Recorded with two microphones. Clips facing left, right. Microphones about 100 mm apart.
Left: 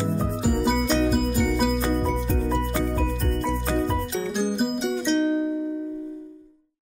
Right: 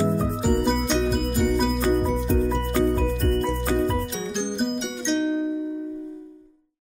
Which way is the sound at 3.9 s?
Centre (ahead or behind).